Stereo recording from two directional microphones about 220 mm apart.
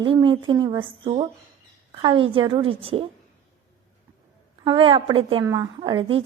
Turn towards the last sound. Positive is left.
turn(degrees=-25)  # may be behind; listen again after turning